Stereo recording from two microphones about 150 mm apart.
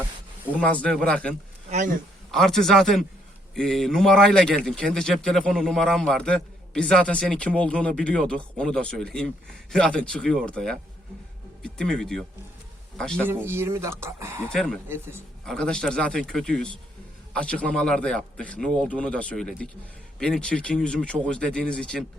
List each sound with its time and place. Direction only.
0.7 s speech: 5° left (ahead or behind)
1.7 s speech: 55° right (ahead or behind)
2.3 s a man's voice: centre (ahead or behind)
13.2 s speech: 15° right (ahead or behind)
14.5 s a man's voice: 5° left (ahead or behind)
14.8 s speech: 15° right (ahead or behind)
15.4 s a man's voice: 5° left (ahead or behind)